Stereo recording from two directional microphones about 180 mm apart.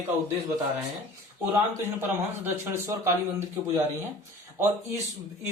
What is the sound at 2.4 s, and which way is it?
Speech, 15° right (ahead or behind).